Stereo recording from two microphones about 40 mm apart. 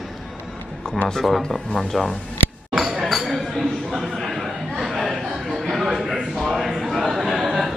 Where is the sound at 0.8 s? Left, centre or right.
Centre.